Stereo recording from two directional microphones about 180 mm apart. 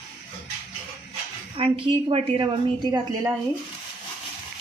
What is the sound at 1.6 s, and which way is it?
A woman's voice, 30° right (ahead or behind).